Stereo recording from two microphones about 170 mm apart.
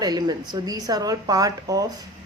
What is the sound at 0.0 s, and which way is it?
Speech, 25° right (ahead or behind).